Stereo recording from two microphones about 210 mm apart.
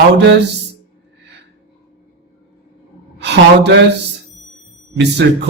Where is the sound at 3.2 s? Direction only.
55° right (ahead or behind).